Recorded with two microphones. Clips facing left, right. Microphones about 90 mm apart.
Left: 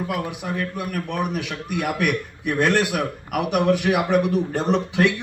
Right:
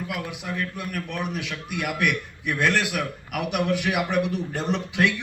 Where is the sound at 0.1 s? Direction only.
35° left (ahead or behind).